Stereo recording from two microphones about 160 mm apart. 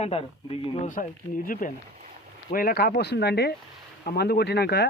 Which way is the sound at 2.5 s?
70° left (ahead or behind).